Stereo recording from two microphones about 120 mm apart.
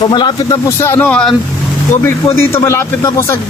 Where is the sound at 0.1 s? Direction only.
40° left (ahead or behind).